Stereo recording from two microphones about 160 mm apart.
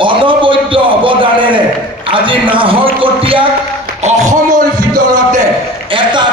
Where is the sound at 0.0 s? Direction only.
30° right (ahead or behind).